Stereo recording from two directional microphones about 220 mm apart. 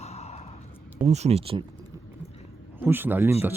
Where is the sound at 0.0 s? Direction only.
30° left (ahead or behind).